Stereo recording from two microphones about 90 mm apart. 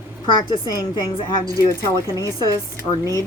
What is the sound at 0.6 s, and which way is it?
Speech, 45° left (ahead or behind).